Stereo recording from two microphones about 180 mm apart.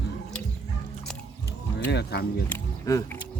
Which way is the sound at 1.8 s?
65° left (ahead or behind).